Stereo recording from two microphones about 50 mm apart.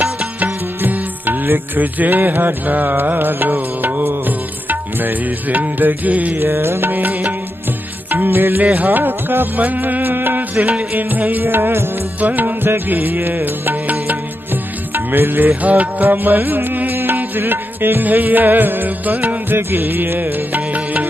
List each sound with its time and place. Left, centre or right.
0.4 s music: right
6.5 s music: right
6.9 s music: right
8.6 s music: right
11.4 s music: right
12.2 s music: right
19.5 s music: right